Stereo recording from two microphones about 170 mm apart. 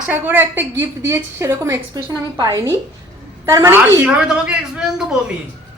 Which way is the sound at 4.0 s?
5° right (ahead or behind).